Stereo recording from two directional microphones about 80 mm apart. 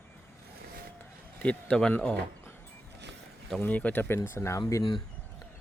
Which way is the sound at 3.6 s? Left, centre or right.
Left.